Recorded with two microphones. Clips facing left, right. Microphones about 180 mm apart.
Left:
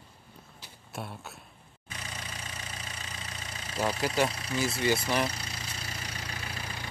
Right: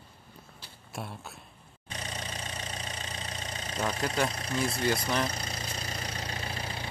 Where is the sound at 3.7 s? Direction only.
5° left (ahead or behind).